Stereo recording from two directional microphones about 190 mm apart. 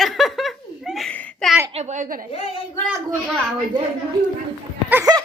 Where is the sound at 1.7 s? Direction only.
40° right (ahead or behind).